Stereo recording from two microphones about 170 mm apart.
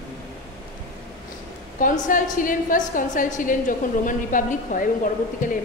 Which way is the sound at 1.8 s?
50° left (ahead or behind).